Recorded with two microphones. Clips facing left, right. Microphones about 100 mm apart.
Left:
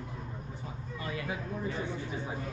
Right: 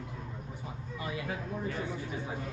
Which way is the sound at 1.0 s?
20° right (ahead or behind).